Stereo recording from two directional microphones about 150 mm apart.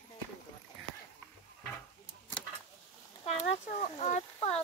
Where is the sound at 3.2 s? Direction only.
50° left (ahead or behind).